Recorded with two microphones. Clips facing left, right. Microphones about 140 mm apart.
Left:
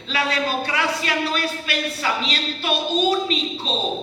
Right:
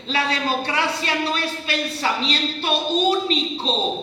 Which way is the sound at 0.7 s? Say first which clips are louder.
Even; 30° right (ahead or behind).